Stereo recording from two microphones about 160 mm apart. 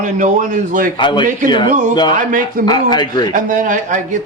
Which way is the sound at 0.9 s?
30° left (ahead or behind).